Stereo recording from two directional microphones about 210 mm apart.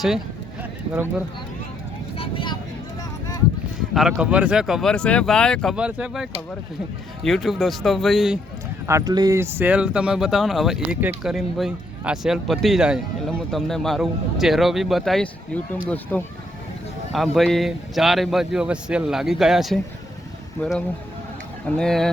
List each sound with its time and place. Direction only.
2.1 s vehicle: 25° left (ahead or behind)
3.9 s speech: 5° right (ahead or behind)
8.9 s speech: 15° right (ahead or behind); by 22.1 s centre (ahead or behind)